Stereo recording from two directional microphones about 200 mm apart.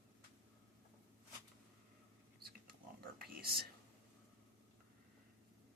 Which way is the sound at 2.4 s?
50° right (ahead or behind).